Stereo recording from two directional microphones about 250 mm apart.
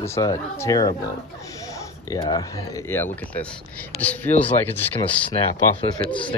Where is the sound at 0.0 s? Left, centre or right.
Centre.